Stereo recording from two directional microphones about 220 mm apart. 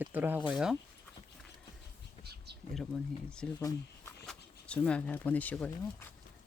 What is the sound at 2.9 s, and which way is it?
Speech, 5° left (ahead or behind).